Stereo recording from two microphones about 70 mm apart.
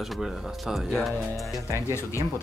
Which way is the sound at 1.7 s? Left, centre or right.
Left.